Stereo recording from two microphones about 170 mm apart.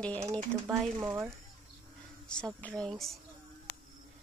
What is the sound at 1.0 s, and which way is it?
Speech, 5° right (ahead or behind).